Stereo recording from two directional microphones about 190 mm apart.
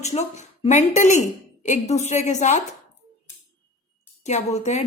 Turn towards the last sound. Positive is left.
turn(degrees=35)  # may be behind; listen again after turning